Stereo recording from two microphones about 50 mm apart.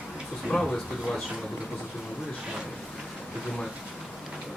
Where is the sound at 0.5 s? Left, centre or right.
Centre.